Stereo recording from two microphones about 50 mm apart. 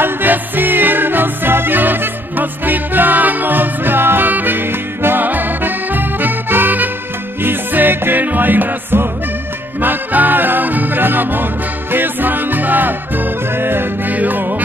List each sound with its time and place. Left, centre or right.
0.0 s music: right